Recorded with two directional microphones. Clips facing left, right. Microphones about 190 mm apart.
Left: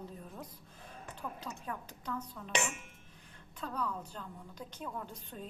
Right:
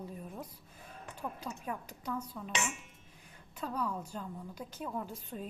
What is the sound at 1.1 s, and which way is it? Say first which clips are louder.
A woman's voice: right 3 dB; 10° right (ahead or behind).